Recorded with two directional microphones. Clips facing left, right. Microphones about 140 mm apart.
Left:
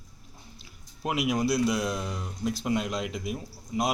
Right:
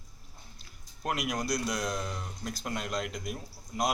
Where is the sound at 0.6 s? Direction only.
5° left (ahead or behind).